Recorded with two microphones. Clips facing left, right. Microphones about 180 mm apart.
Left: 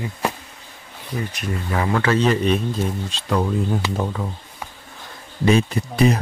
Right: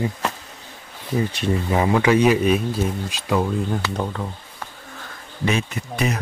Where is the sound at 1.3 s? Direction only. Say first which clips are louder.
Right 4 dB; 25° right (ahead or behind); by 3.4 s 5° right (ahead or behind).